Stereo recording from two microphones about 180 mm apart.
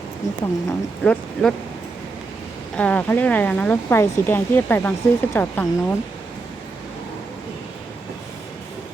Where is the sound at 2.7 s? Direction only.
5° left (ahead or behind).